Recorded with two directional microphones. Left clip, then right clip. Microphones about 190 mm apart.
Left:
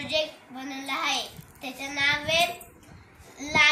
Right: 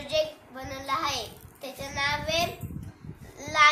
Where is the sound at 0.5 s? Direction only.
30° right (ahead or behind).